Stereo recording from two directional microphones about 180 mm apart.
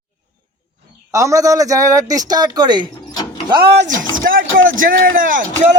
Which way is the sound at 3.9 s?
50° right (ahead or behind).